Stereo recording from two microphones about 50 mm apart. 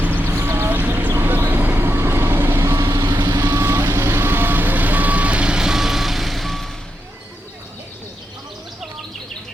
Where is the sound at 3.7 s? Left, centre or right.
Right; by 6.6 s centre.